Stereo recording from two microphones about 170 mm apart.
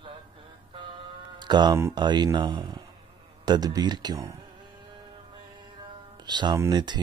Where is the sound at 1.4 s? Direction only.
25° right (ahead or behind).